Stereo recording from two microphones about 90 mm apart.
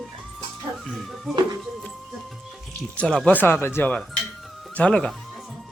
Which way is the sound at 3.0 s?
10° left (ahead or behind).